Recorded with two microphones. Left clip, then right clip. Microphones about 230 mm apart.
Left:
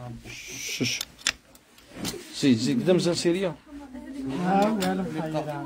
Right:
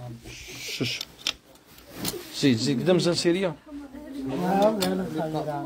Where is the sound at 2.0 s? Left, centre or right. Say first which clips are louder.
Even; centre.